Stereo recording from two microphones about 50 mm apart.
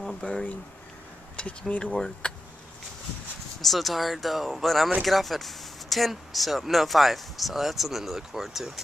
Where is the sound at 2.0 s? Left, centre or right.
Centre.